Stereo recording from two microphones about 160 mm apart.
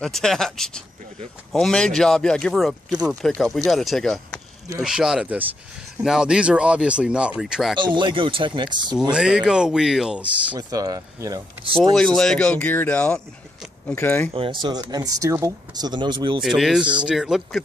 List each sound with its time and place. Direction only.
0.0 s speech: 5° left (ahead or behind)
7.8 s speech: 30° right (ahead or behind)
9.1 s speech: 5° right (ahead or behind)
10.5 s speech: 20° right (ahead or behind)
11.6 s speech: 35° right (ahead or behind)
11.9 s speech: 5° left (ahead or behind)
14.3 s speech: 35° right (ahead or behind)
16.4 s speech: centre (ahead or behind)